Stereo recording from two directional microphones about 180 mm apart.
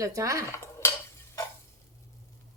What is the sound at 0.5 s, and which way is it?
Dishes, 15° left (ahead or behind).